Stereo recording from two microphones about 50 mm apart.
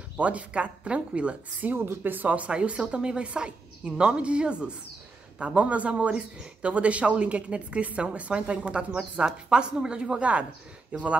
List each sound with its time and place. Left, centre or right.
0.2 s speech: right
1.8 s speech: right